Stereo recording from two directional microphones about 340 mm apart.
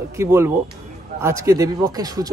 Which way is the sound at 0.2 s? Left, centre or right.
Centre.